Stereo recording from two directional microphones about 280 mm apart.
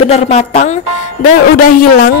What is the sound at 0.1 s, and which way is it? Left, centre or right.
Speech, left.